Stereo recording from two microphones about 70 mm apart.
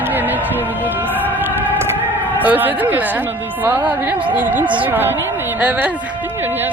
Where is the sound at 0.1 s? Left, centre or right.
Right.